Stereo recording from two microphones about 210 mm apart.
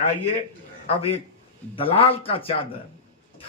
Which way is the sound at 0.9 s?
25° left (ahead or behind).